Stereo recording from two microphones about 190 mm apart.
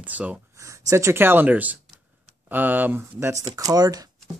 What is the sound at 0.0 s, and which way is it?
Speech, 5° right (ahead or behind).